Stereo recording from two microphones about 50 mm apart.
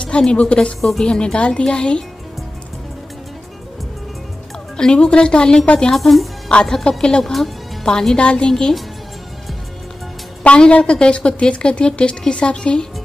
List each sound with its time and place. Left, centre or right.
0.3 s a woman's voice: left
0.7 s speech: centre
1.0 s a woman's voice: centre
4.7 s speech: centre
5.9 s speech: centre
10.4 s a woman's voice: left